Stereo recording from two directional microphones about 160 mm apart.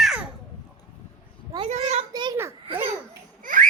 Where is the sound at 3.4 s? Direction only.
55° right (ahead or behind).